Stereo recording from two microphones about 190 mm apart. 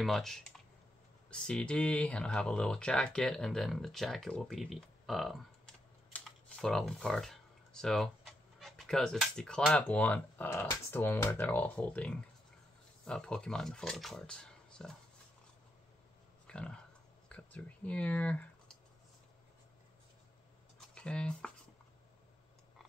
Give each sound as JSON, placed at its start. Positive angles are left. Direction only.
{"t": 0.0, "sound": "speech", "side_deg": 0}
{"t": 6.0, "sound": "computer keyboard", "side_deg": 5}
{"t": 8.5, "sound": "speech", "side_deg": 0}
{"t": 16.4, "sound": "a sound", "side_deg": 5}
{"t": 17.3, "sound": "speech", "side_deg": 5}
{"t": 20.9, "sound": "speech", "side_deg": 5}